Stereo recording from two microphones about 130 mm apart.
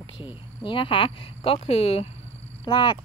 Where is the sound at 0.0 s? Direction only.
40° left (ahead or behind).